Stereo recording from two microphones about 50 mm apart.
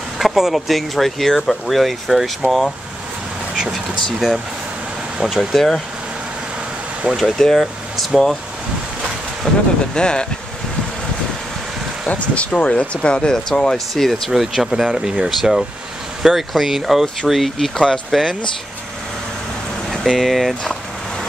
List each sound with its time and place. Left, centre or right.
0.2 s speech: centre
3.7 s speech: centre
7.2 s speech: centre
9.5 s speech: centre
12.1 s speech: left; by 17.9 s centre
19.9 s speech: centre